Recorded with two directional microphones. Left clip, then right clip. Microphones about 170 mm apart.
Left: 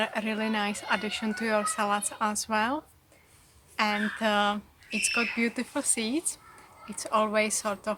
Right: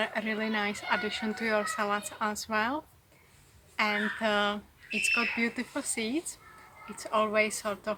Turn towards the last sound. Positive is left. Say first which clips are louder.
# left 2 dB
turn(degrees=30)  # may be behind; listen again after turning